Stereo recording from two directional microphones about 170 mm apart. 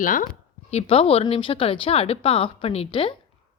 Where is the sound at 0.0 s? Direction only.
50° left (ahead or behind).